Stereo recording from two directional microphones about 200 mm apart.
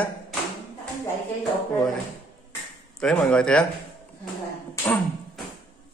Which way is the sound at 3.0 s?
5° left (ahead or behind).